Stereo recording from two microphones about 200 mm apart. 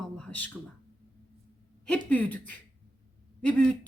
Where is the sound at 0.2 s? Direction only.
5° left (ahead or behind).